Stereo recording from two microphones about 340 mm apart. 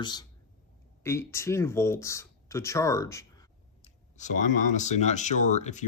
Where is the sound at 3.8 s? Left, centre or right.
Left.